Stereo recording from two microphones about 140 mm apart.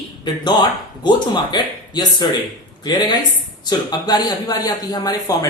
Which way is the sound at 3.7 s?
30° left (ahead or behind).